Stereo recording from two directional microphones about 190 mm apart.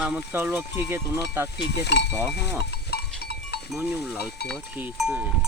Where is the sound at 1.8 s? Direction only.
65° left (ahead or behind).